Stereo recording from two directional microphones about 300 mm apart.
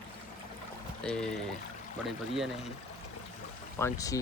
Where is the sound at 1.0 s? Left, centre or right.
Centre.